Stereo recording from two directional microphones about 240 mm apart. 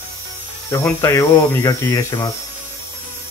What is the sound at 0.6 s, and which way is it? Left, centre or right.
Speech, centre.